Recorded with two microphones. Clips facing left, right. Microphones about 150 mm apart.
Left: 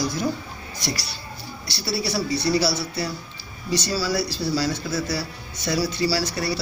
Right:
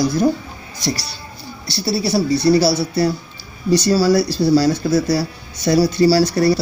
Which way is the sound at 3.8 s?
40° right (ahead or behind).